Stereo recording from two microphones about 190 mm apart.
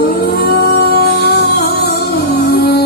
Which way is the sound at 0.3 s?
55° left (ahead or behind).